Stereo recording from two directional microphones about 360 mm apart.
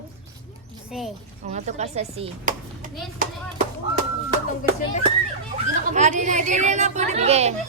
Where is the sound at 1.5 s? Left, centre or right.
Centre.